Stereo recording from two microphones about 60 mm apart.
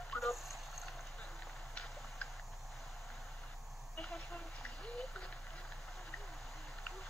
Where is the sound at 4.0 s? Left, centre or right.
Centre.